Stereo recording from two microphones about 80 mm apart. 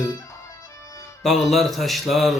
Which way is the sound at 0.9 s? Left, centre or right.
Left.